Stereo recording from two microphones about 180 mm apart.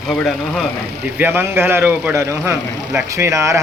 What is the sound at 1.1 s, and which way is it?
Speech, 10° right (ahead or behind).